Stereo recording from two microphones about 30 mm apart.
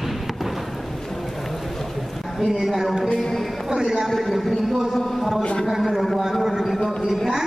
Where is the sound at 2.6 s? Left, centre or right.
Centre.